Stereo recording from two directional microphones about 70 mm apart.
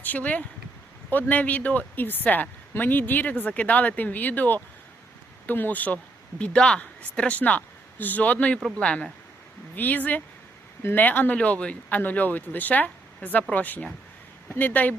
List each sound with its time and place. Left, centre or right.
0.0 s speech: left
6.4 s speech: centre